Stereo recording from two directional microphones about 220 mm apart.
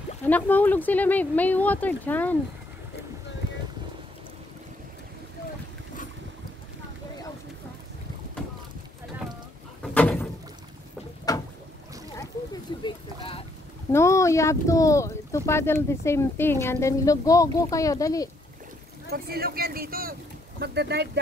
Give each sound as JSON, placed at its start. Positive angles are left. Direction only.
{"t": 0.2, "sound": "speech", "side_deg": 10}
{"t": 9.8, "sound": "a sound", "side_deg": 5}
{"t": 11.3, "sound": "boat", "side_deg": 15}
{"t": 12.8, "sound": "a sound", "side_deg": 25}
{"t": 13.9, "sound": "speech", "side_deg": 15}
{"t": 19.0, "sound": "speech", "side_deg": -45}